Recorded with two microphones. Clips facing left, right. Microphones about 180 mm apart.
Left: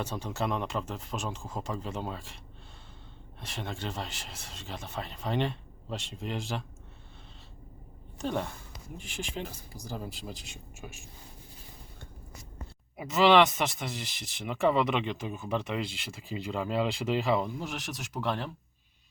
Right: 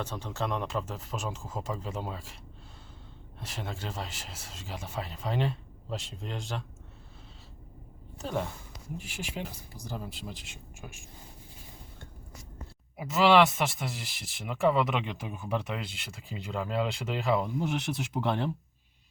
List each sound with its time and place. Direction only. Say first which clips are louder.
0.0 s speech: left 1 dB; 10° left (ahead or behind)
3.4 s speech: left 1 dB; 5° right (ahead or behind)
8.2 s speech: left 1 dB; 5° right (ahead or behind)
13.0 s speech: even; 5° right (ahead or behind)
18.1 s speech: right 2 dB; 20° right (ahead or behind)